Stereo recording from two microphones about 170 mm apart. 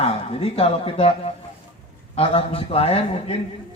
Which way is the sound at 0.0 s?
35° left (ahead or behind).